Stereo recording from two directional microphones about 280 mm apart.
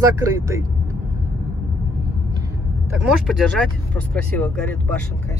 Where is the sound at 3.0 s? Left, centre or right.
Centre.